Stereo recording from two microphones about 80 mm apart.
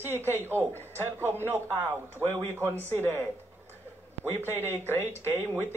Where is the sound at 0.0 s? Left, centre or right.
Right.